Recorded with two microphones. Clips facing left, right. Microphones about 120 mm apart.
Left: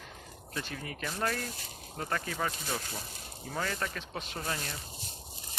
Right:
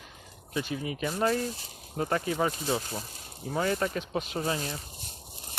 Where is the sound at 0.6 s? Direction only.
10° right (ahead or behind).